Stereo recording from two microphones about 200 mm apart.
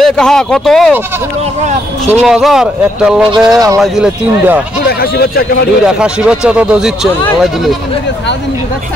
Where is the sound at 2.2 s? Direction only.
Centre (ahead or behind).